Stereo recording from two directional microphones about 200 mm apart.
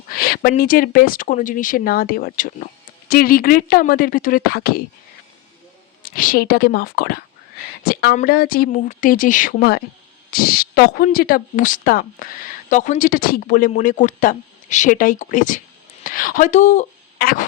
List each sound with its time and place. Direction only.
0.1 s speech: 50° left (ahead or behind)
6.0 s speech: 45° left (ahead or behind)